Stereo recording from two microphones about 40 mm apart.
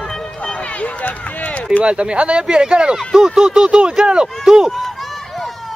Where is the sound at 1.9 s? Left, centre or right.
Right.